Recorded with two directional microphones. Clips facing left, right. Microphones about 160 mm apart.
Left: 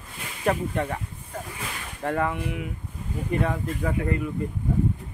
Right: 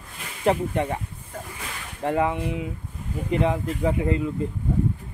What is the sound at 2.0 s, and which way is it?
Speech, 20° right (ahead or behind).